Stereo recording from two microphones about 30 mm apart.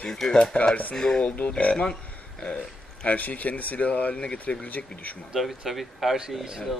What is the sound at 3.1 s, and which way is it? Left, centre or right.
Speech, left.